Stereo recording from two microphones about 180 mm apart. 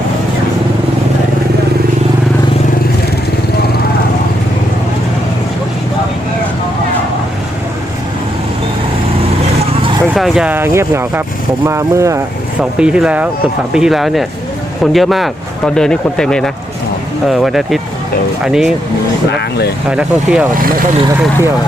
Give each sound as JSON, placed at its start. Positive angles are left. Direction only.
{"t": 10.2, "sound": "speech", "side_deg": 0}
{"t": 12.8, "sound": "speech", "side_deg": -5}
{"t": 19.9, "sound": "speech", "side_deg": -5}